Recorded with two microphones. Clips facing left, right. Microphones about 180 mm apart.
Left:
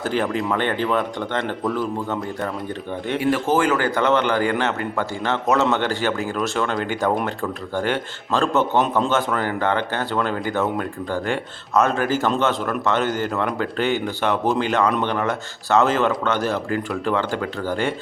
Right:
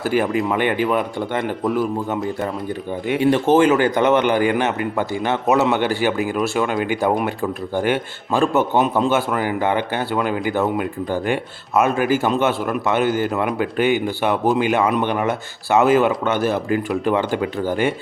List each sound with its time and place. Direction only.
0.0 s speech: 10° right (ahead or behind)
3.2 s speech: 25° right (ahead or behind)